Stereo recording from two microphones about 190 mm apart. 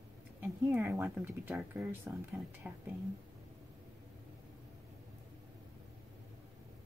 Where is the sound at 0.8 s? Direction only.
10° right (ahead or behind).